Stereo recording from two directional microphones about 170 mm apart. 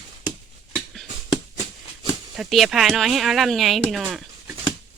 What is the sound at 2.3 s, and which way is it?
Speech, centre (ahead or behind).